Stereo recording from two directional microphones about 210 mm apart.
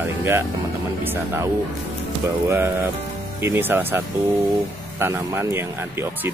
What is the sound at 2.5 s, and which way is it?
Speech, 10° right (ahead or behind).